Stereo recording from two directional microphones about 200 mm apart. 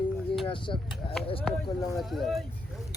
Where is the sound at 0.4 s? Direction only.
25° left (ahead or behind).